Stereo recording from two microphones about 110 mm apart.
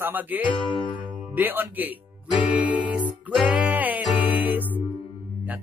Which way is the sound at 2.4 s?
15° right (ahead or behind).